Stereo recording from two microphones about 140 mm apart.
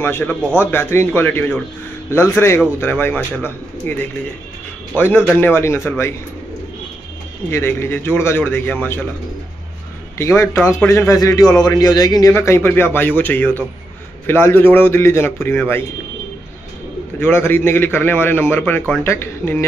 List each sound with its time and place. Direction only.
0.0 s a man's voice: 15° left (ahead or behind)
7.5 s a man's voice: 15° left (ahead or behind)
10.1 s a man's voice: 20° left (ahead or behind)
17.2 s a man's voice: 15° left (ahead or behind)